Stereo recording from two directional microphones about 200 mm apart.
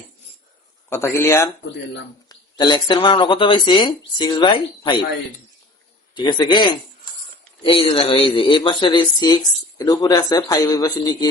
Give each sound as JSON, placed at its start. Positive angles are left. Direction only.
{"t": 0.9, "sound": "speech", "side_deg": 15}
{"t": 6.1, "sound": "speech", "side_deg": 20}